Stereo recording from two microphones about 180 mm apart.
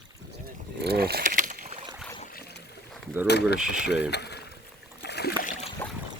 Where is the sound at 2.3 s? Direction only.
60° left (ahead or behind).